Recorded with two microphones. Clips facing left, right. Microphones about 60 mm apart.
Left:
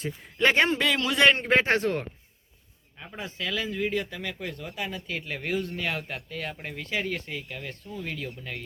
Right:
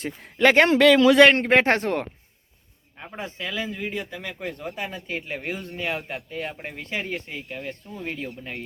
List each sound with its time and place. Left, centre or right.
0.0 s a man's voice: right
1.5 s speech: right
3.0 s speech: right